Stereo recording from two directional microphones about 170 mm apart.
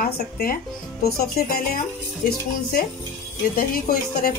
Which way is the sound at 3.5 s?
55° left (ahead or behind).